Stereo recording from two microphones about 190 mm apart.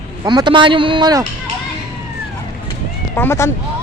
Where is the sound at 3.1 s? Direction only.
15° left (ahead or behind).